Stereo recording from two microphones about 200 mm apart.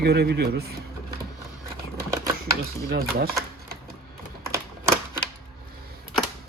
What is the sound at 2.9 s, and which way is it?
Speech, 50° right (ahead or behind).